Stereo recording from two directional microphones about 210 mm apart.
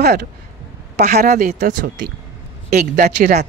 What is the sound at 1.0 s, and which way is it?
Speech, 40° right (ahead or behind).